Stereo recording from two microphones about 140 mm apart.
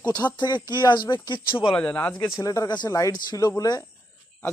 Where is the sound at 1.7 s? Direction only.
10° left (ahead or behind).